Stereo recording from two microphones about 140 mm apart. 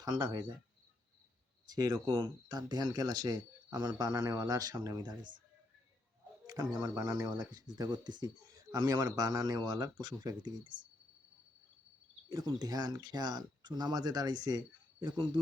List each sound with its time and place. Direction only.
0.0 s speech: 30° right (ahead or behind)
1.7 s speech: 25° right (ahead or behind)
6.5 s speech: 25° right (ahead or behind)
12.3 s speech: 30° right (ahead or behind)